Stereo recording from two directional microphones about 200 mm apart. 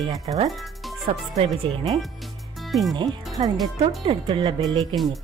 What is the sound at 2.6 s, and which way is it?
Music, centre (ahead or behind).